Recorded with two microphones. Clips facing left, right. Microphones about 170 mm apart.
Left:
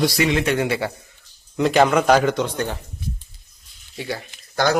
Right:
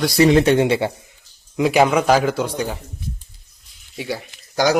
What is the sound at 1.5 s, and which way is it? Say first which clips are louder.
Speech: right 1 dB; 5° right (ahead or behind).